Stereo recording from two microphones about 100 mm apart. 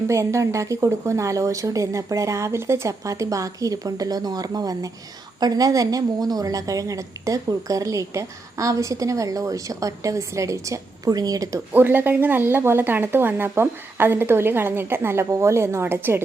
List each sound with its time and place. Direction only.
0.1 s a woman's voice: 30° right (ahead or behind)
11.7 s a woman's voice: 20° right (ahead or behind)